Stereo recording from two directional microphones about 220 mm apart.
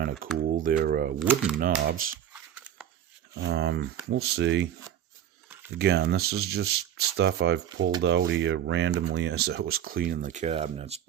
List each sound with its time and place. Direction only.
0.5 s speech: 40° right (ahead or behind)
1.2 s speech: 5° right (ahead or behind)
1.5 s speech: 45° right (ahead or behind)
2.3 s a sound: 5° right (ahead or behind)
3.4 s speech: 50° right (ahead or behind)
5.8 s speech: 45° right (ahead or behind); by 11.0 s 30° right (ahead or behind)